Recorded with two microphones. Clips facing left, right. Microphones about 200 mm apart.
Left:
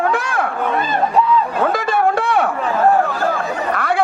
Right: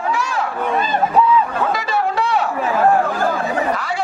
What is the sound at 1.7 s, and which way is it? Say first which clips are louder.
Chatter: left 3 dB; 50° left (ahead or behind).